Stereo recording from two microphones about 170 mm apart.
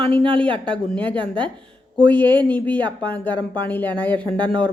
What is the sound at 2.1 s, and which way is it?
Speech, 10° left (ahead or behind).